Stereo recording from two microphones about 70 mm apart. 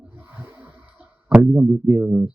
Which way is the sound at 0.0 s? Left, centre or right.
Centre.